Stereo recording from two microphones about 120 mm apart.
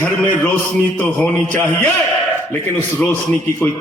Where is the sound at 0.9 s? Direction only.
15° left (ahead or behind).